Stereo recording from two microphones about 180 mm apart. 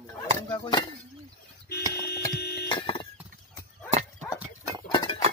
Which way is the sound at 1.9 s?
60° left (ahead or behind).